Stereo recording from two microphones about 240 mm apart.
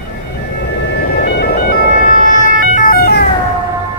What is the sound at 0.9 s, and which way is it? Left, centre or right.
Ambulance, left.